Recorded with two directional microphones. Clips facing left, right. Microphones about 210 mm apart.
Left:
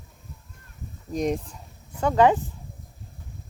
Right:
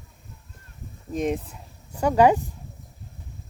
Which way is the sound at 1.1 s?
Centre (ahead or behind).